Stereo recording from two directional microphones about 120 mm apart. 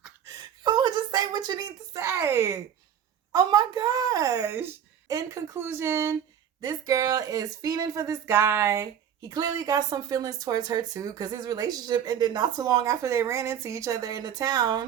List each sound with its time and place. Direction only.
0.3 s a sound: 35° right (ahead or behind)
3.3 s a woman's voice: 35° right (ahead or behind)
6.6 s a woman's voice: 30° right (ahead or behind)